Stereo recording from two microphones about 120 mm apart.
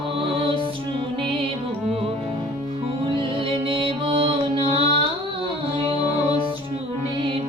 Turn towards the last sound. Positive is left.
turn(degrees=-50)  # may be behind; listen again after turning